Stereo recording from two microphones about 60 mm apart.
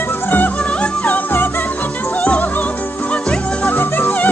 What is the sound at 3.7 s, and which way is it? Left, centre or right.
Music, left.